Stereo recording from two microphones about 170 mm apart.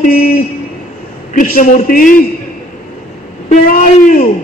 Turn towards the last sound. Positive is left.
turn(degrees=50)  # may be behind; listen again after turning